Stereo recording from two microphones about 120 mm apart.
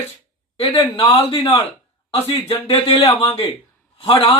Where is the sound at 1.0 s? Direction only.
50° left (ahead or behind).